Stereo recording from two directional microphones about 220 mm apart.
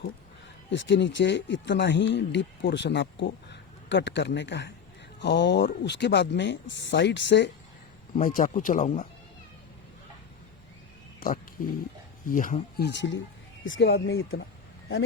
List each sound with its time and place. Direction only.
0.7 s speech: 55° left (ahead or behind)
8.1 s speech: 40° left (ahead or behind)
11.2 s speech: 40° left (ahead or behind)
12.9 s speech: 55° left (ahead or behind)